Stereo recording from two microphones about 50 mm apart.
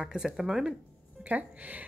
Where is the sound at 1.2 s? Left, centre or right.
Right.